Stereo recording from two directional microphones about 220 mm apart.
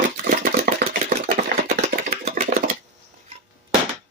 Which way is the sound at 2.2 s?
35° right (ahead or behind).